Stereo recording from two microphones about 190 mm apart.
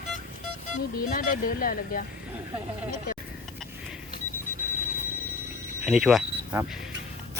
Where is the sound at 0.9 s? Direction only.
50° left (ahead or behind).